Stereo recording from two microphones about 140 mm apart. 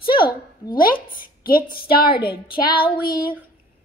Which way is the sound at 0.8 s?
90° left.